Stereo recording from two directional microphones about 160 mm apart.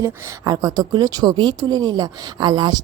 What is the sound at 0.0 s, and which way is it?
A woman's voice, 25° right (ahead or behind).